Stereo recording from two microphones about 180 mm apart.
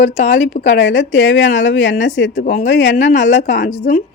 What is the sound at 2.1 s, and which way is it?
Speech, 90° left.